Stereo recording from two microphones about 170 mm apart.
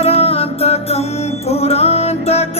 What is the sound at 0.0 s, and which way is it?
Music, 35° left (ahead or behind).